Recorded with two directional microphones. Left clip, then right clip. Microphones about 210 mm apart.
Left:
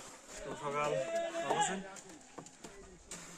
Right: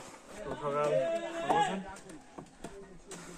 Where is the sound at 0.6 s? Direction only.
55° left (ahead or behind).